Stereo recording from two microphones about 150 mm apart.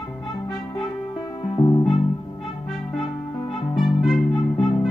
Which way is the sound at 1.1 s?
35° left (ahead or behind).